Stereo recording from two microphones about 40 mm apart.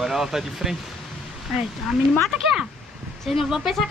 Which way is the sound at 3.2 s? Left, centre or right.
Centre.